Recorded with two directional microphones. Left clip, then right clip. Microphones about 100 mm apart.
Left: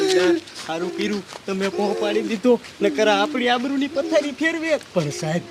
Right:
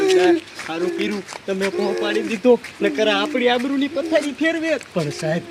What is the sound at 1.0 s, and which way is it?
Speech, 55° left (ahead or behind).